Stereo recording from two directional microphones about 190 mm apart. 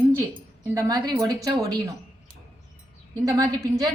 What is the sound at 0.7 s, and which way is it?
A woman's voice, 20° right (ahead or behind).